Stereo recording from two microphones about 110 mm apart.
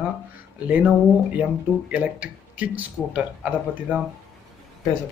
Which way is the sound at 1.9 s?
15° right (ahead or behind).